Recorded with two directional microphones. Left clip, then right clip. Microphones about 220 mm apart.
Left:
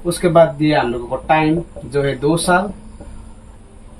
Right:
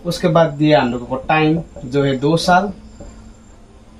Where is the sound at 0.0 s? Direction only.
25° right (ahead or behind).